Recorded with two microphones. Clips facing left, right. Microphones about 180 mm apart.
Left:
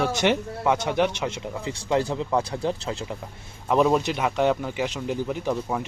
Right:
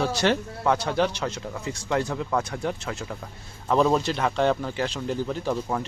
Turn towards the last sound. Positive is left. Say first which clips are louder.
# left 1 dB
turn(degrees=15)  # may be behind; listen again after turning